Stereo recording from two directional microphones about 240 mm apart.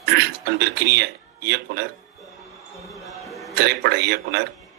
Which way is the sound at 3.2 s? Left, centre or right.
Centre.